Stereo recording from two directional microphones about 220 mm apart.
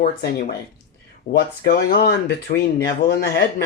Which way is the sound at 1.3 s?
50° left (ahead or behind).